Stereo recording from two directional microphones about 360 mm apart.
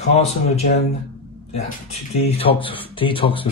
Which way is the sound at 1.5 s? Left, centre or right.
Centre.